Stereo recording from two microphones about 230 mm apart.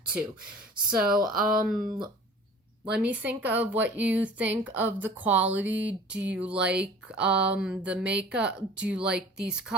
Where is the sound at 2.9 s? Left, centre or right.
Centre.